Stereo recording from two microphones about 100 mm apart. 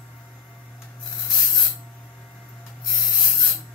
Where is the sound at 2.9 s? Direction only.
Centre (ahead or behind).